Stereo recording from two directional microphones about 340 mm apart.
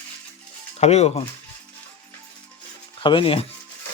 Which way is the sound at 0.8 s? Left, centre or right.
Centre.